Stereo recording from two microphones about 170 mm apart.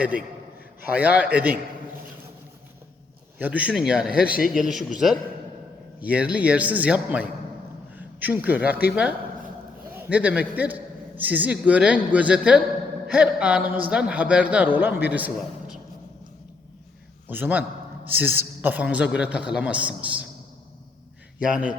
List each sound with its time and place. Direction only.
0.9 s a man's voice: 10° right (ahead or behind)
3.3 s a man's voice: 10° right (ahead or behind)
4.3 s a man's voice: 55° left (ahead or behind)
4.5 s a man's voice: centre (ahead or behind)
17.2 s a man's voice: 10° right (ahead or behind)
21.4 s speech: 5° right (ahead or behind)